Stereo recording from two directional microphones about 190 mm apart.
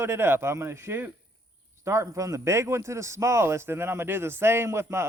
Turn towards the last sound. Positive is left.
turn(degrees=-15)  # may be behind; listen again after turning